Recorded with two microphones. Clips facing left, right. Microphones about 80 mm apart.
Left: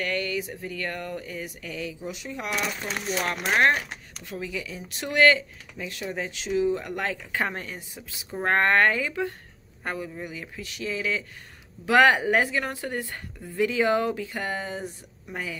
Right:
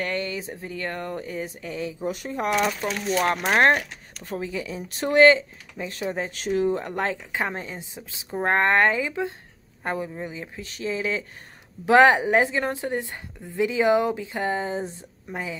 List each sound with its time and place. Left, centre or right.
0.0 s a woman's voice: right
2.0 s speech: right
6.4 s speech: right
7.3 s a woman's voice: centre